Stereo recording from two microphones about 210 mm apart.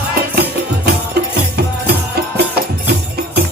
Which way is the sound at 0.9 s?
50° right (ahead or behind).